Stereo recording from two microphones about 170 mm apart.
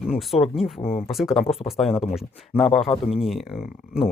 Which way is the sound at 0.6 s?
35° left (ahead or behind).